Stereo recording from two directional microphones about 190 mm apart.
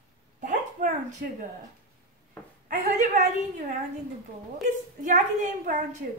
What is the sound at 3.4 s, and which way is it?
Speech, 40° right (ahead or behind).